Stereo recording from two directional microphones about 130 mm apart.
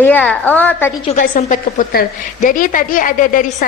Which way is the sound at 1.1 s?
90° left.